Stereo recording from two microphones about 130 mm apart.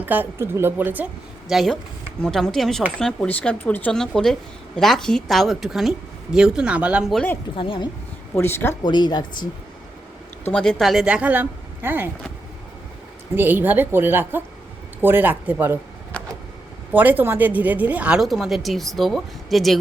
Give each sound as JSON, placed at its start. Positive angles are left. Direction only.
{"t": 0.0, "sound": "a woman's voice", "side_deg": -15}
{"t": 1.5, "sound": "a woman's voice", "side_deg": 0}
{"t": 7.5, "sound": "speech", "side_deg": 40}
{"t": 8.4, "sound": "speech", "side_deg": 20}
{"t": 8.8, "sound": "speech", "side_deg": 35}
{"t": 10.5, "sound": "a woman's voice", "side_deg": 5}
{"t": 13.3, "sound": "a woman's voice", "side_deg": -15}
{"t": 16.1, "sound": "vehicle", "side_deg": 10}
{"t": 16.9, "sound": "a woman's voice", "side_deg": -15}